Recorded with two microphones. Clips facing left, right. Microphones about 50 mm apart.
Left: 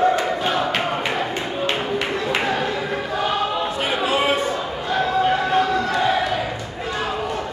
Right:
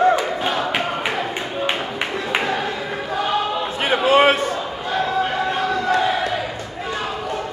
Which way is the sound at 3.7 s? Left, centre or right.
Right.